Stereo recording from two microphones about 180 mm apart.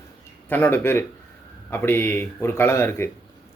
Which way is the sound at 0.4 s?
10° left (ahead or behind).